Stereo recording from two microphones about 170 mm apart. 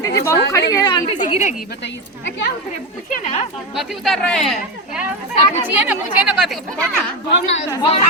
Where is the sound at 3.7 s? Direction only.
Centre (ahead or behind).